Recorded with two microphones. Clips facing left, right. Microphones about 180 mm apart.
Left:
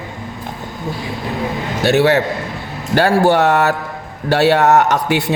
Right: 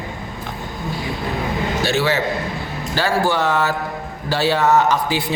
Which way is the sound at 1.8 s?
60° left (ahead or behind).